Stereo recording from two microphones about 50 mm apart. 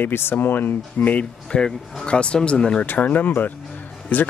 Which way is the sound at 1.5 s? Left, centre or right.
Centre.